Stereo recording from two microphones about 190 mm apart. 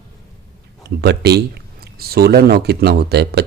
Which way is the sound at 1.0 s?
60° right (ahead or behind).